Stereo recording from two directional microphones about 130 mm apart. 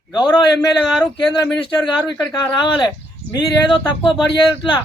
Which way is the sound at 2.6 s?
35° left (ahead or behind).